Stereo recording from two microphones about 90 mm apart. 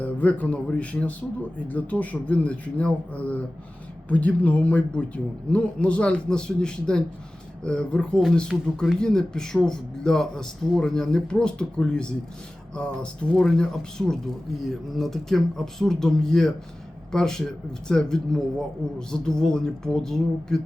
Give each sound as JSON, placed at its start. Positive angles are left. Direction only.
{"t": 0.0, "sound": "speech", "side_deg": 15}